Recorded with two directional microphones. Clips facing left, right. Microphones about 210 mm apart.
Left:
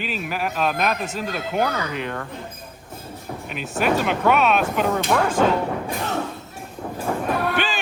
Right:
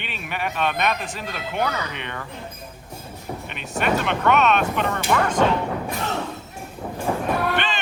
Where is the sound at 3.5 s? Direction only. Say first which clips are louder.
Left 2 dB; centre (ahead or behind).